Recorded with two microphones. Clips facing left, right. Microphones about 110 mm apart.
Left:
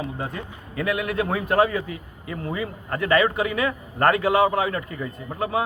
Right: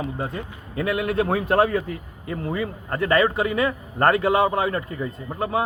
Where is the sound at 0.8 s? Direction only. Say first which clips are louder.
Right 2 dB; 30° right (ahead or behind).